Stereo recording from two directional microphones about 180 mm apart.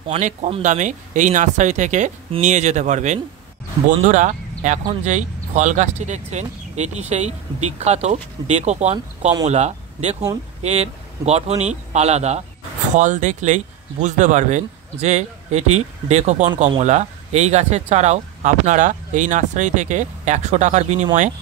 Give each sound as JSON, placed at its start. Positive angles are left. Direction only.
{"t": 0.1, "sound": "a man's voice", "side_deg": -35}